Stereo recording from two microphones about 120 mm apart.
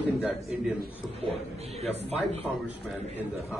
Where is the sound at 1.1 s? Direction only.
60° right (ahead or behind).